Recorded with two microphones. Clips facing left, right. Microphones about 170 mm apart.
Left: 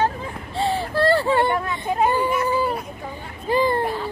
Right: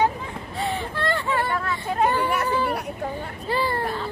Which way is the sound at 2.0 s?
10° left (ahead or behind).